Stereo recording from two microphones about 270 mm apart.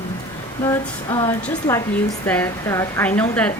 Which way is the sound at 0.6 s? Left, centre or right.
Centre.